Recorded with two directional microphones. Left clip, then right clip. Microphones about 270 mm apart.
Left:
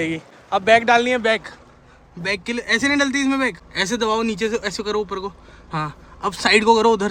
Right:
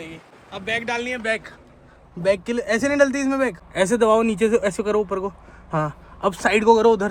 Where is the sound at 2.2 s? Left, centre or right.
Centre.